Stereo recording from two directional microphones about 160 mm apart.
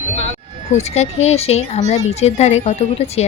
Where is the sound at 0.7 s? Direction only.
45° left (ahead or behind).